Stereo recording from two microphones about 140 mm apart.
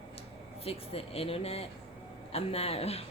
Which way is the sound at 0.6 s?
45° left (ahead or behind).